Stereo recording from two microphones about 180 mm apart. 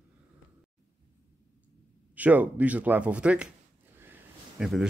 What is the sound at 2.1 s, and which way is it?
Speech, 10° right (ahead or behind).